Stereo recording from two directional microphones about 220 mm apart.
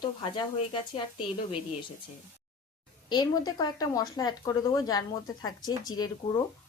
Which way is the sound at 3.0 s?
20° left (ahead or behind).